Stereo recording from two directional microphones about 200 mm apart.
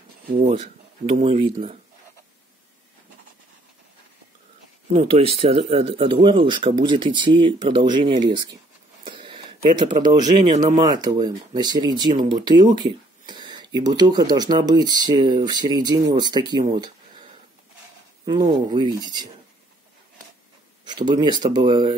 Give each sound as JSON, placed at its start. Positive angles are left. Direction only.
{"t": 0.3, "sound": "speech", "side_deg": -40}
{"t": 1.1, "sound": "speech", "side_deg": -30}
{"t": 4.9, "sound": "speech", "side_deg": -30}
{"t": 9.0, "sound": "a sound", "side_deg": -25}
{"t": 10.0, "sound": "speech", "side_deg": -20}
{"t": 18.2, "sound": "speech", "side_deg": -20}
{"t": 20.8, "sound": "speech", "side_deg": -20}